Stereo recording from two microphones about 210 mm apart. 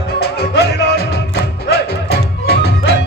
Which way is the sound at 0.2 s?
50° left (ahead or behind).